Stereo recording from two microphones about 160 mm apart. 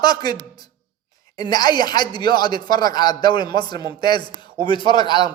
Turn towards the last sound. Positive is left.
turn(degrees=25)  # may be behind; listen again after turning